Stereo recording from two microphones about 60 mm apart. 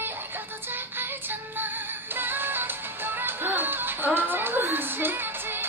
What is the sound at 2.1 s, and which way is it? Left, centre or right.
Music, right.